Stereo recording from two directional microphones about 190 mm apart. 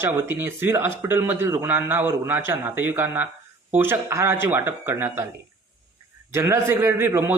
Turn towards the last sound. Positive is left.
turn(degrees=-15)  # may be behind; listen again after turning